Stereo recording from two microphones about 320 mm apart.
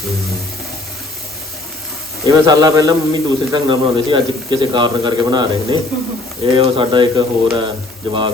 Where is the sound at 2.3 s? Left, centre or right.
Centre.